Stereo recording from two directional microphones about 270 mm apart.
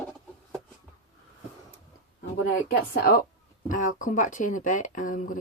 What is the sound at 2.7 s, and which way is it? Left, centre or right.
A woman's voice, left.